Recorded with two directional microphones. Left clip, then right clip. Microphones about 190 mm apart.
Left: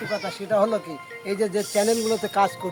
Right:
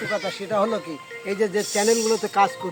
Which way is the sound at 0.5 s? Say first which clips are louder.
Left 2 dB; 30° left (ahead or behind).